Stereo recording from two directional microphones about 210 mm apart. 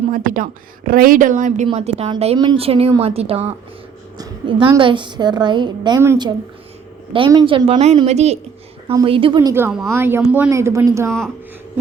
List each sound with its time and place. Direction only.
0.1 s a woman's voice: 40° right (ahead or behind); by 11.1 s 15° right (ahead or behind)